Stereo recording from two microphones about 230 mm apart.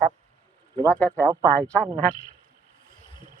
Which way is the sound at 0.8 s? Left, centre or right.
Centre.